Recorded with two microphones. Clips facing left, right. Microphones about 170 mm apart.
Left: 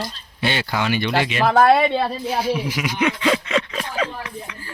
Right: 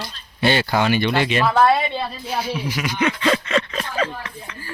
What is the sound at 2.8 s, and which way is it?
Speech, 10° left (ahead or behind).